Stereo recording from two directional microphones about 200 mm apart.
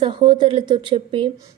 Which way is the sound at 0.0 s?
25° right (ahead or behind).